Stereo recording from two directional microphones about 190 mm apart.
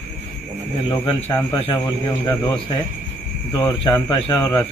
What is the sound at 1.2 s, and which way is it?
Speech, 15° left (ahead or behind).